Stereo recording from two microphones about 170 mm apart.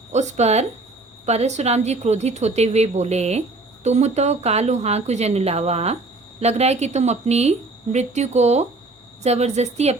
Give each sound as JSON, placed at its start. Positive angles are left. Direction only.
{"t": 0.1, "sound": "a woman's voice", "side_deg": -40}